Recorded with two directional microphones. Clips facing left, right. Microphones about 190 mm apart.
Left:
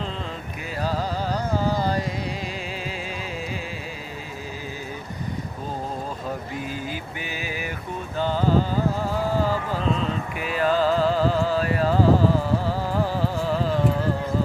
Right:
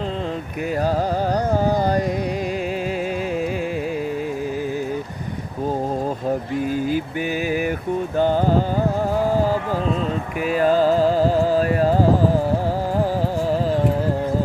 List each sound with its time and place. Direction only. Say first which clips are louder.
1.5 s carnatic music: right 3 dB; 50° right (ahead or behind)
8.2 s music: right 4 dB; 50° right (ahead or behind)
9.1 s a sound: right 6 dB; 45° right (ahead or behind)